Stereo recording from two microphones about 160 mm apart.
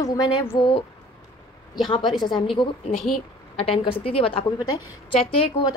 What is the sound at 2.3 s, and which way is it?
A woman's voice, 30° left (ahead or behind).